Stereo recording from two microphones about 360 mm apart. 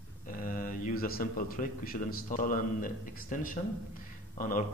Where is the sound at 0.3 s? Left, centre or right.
Left.